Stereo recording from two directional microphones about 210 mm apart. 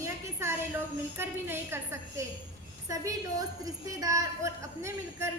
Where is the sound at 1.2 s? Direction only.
10° right (ahead or behind).